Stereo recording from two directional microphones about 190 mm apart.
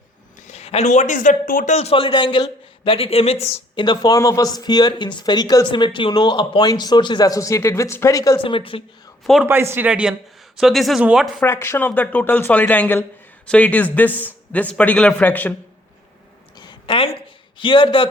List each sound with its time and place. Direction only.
0.4 s a man's voice: 35° left (ahead or behind)
9.2 s speech: centre (ahead or behind)
9.5 s speech: 10° right (ahead or behind)
11.4 s speech: 15° left (ahead or behind)
16.6 s a sound: 25° left (ahead or behind)
17.6 s speech: 25° left (ahead or behind)